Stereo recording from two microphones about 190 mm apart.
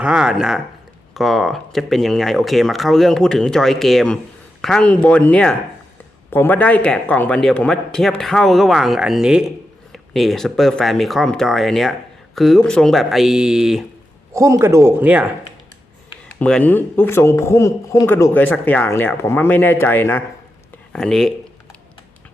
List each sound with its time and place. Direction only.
0.0 s speech: 5° right (ahead or behind)
14.3 s speech: 15° right (ahead or behind)
16.4 s a man's voice: 5° left (ahead or behind)